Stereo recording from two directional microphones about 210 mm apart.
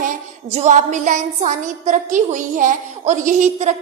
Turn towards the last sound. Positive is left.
turn(degrees=-35)  # may be behind; listen again after turning